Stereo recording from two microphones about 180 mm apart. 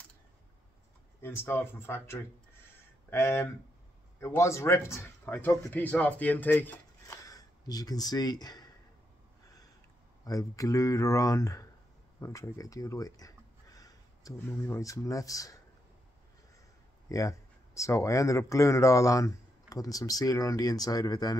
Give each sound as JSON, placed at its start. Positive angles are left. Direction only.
{"t": 1.2, "sound": "speech", "side_deg": 15}
{"t": 10.2, "sound": "speech", "side_deg": 20}
{"t": 17.1, "sound": "speech", "side_deg": 15}